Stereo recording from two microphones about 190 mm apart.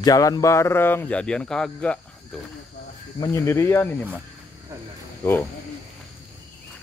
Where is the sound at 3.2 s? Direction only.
15° left (ahead or behind).